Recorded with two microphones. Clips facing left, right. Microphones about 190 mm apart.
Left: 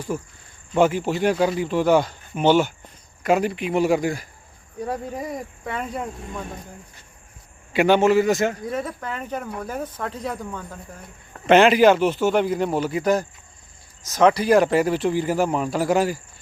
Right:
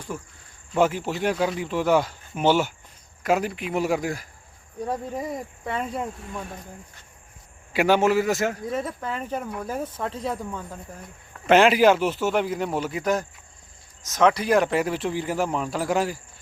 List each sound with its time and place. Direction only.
0.7 s speech: centre (ahead or behind)
7.7 s speech: 5° right (ahead or behind)